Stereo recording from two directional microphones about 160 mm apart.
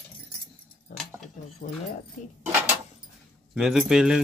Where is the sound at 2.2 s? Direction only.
50° left (ahead or behind).